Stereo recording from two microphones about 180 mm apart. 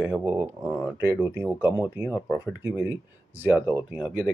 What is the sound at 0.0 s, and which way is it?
Speech, 10° right (ahead or behind).